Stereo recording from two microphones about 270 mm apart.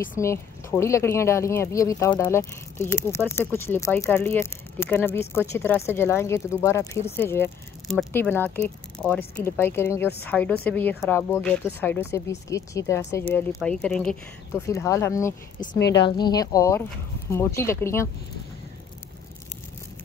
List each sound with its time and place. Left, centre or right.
0.2 s speech: centre
15.7 s a woman's voice: left
16.2 s speech: centre